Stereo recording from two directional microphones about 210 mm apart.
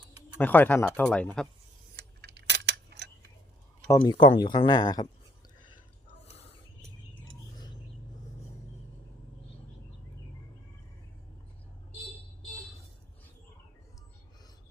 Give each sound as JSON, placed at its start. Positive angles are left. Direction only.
{"t": 0.3, "sound": "speech", "side_deg": 10}
{"t": 2.0, "sound": "a sound", "side_deg": -55}
{"t": 3.8, "sound": "speech", "side_deg": 15}